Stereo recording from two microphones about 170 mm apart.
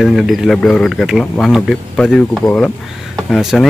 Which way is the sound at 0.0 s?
Centre (ahead or behind).